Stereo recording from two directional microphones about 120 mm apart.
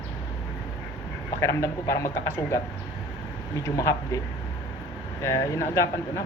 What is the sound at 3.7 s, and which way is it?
Speech, 25° left (ahead or behind).